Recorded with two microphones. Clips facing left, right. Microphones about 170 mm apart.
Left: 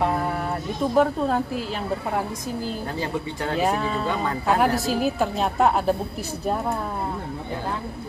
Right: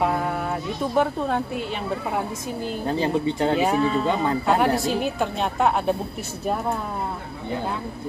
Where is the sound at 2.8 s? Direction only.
25° right (ahead or behind).